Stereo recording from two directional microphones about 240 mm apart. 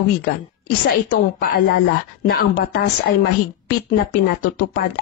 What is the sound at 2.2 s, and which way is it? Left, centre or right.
Speech, left.